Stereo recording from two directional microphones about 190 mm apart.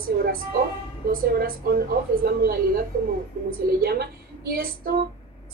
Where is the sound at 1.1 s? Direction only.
50° right (ahead or behind).